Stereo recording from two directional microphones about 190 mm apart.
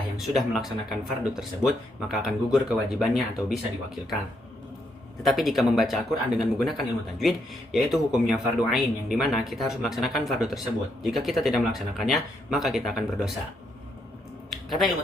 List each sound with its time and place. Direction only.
0.2 s a man's voice: centre (ahead or behind)
5.2 s a man's voice: centre (ahead or behind)
14.5 s a sound: centre (ahead or behind)